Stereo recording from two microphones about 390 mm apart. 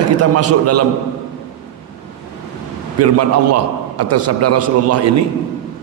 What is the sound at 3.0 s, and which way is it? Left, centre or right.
A man's voice, right.